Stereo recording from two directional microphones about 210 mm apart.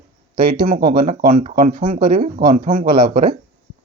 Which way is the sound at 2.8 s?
50° right (ahead or behind).